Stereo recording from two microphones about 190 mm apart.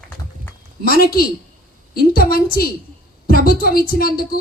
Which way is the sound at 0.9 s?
50° left (ahead or behind).